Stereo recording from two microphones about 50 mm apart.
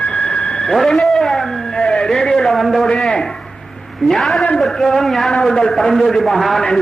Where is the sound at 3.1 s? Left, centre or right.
Centre.